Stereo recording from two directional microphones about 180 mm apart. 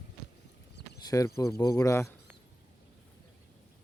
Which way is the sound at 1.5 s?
20° left (ahead or behind).